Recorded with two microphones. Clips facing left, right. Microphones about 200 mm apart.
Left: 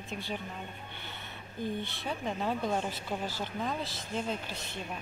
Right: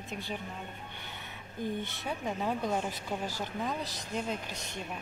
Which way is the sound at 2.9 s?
45° right (ahead or behind).